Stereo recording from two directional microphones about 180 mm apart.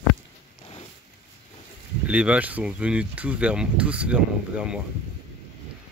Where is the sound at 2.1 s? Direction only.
5° right (ahead or behind).